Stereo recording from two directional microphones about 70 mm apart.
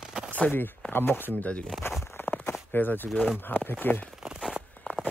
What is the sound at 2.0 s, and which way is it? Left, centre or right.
Walk, left.